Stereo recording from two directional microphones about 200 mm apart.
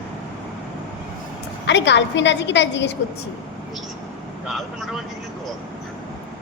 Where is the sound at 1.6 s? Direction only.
60° left (ahead or behind).